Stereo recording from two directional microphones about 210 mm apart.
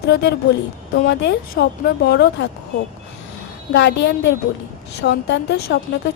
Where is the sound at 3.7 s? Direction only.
55° left (ahead or behind).